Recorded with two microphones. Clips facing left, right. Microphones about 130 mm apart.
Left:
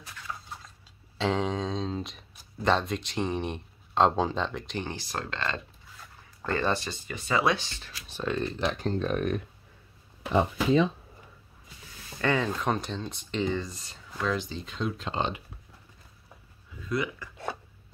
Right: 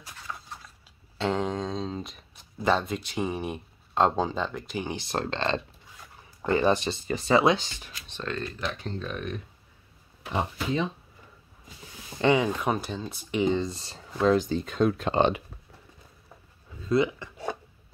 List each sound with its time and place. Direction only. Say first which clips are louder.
1.1 s speech: even; centre (ahead or behind)
4.9 s speech: right 5 dB; 25° right (ahead or behind)
6.4 s speech: right 5 dB; 15° right (ahead or behind)
6.9 s speech: right 7 dB; 35° right (ahead or behind)
7.4 s speech: right 4 dB; 20° right (ahead or behind)
8.1 s speech: left 3 dB; 15° left (ahead or behind)
8.5 s speech: left 4 dB; 30° left (ahead or behind)
8.8 s speech: left 6 dB; 45° left (ahead or behind)
12.2 s speech: right 4 dB; 15° right (ahead or behind); by 15.4 s 65° right (ahead or behind)
16.8 s speech: right 7 dB; 25° right (ahead or behind)